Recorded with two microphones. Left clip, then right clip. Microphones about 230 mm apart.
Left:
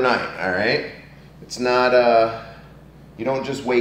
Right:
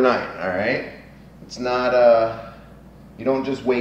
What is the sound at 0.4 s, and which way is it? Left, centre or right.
A man's voice, centre.